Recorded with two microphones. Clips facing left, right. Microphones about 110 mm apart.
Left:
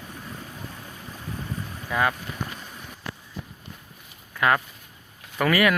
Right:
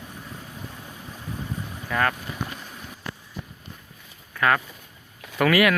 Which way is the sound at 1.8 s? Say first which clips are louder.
Even; 10° left (ahead or behind).